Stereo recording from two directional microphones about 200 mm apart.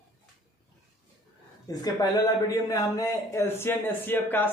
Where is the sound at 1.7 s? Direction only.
20° left (ahead or behind).